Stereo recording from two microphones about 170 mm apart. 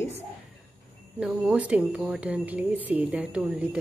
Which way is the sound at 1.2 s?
5° right (ahead or behind).